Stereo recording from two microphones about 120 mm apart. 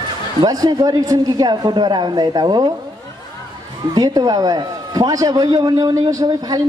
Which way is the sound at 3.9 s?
35° right (ahead or behind).